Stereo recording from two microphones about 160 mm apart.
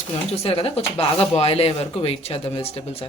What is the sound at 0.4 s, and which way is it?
Speech, 35° left (ahead or behind).